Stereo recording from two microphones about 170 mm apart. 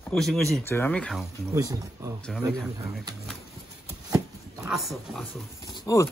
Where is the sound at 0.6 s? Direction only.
10° left (ahead or behind).